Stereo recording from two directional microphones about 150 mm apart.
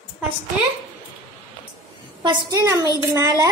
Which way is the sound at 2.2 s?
20° right (ahead or behind).